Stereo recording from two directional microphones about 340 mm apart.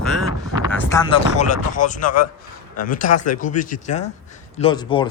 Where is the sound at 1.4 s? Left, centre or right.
Left.